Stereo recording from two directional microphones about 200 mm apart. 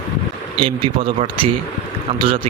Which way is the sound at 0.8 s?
25° right (ahead or behind).